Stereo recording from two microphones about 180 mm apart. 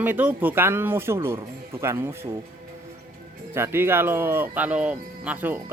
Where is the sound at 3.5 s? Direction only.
15° right (ahead or behind).